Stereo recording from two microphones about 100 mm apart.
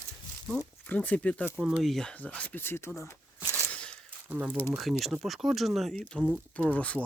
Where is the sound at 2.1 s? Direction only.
15° left (ahead or behind).